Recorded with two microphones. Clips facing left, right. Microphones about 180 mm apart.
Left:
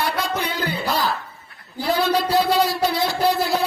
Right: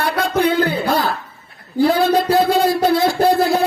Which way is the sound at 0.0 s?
55° right (ahead or behind).